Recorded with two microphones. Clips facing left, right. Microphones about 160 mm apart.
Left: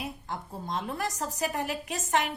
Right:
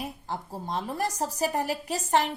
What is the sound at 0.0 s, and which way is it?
A woman's voice, 35° right (ahead or behind).